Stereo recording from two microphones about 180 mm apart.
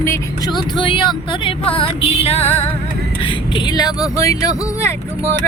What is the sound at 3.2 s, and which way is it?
Speech, 25° left (ahead or behind).